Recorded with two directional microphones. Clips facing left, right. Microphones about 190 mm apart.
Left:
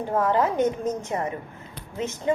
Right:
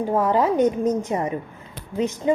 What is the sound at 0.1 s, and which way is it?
A woman's voice, 15° right (ahead or behind).